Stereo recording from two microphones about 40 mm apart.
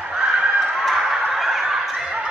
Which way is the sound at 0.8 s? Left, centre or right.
Centre.